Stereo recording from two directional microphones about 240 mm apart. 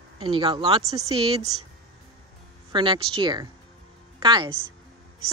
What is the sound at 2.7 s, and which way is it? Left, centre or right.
Speech, centre.